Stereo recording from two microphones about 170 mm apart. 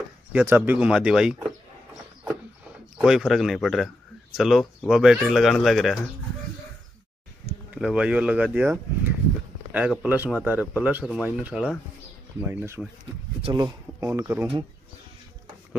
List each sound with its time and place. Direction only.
0.3 s speech: 10° right (ahead or behind)
3.0 s speech: 5° right (ahead or behind)
7.7 s speech: 5° right (ahead or behind)
13.4 s speech: 25° right (ahead or behind)